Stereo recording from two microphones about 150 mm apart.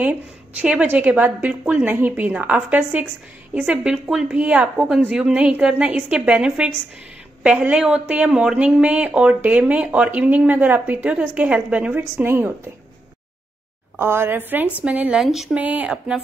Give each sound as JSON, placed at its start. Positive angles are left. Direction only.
{"t": 0.0, "sound": "speech", "side_deg": -10}
{"t": 13.9, "sound": "speech", "side_deg": -15}